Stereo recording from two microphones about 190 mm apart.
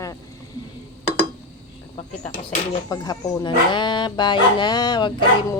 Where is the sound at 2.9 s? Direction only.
20° left (ahead or behind).